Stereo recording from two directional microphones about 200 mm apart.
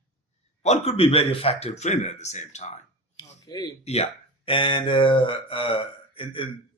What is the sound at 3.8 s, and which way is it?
Speech, 30° left (ahead or behind).